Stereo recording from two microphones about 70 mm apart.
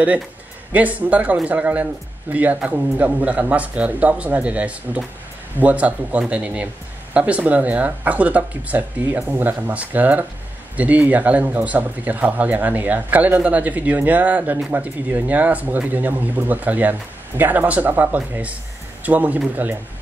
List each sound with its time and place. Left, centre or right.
0.7 s speech: right